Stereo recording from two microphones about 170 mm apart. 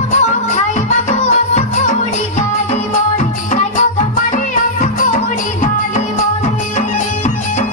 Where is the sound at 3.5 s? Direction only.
50° left (ahead or behind).